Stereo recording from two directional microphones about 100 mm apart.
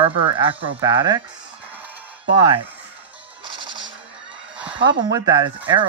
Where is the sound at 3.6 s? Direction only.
55° right (ahead or behind).